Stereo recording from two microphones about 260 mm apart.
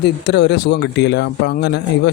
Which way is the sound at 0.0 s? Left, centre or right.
Left.